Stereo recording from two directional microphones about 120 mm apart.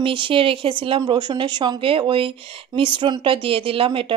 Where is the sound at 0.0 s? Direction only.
45° right (ahead or behind).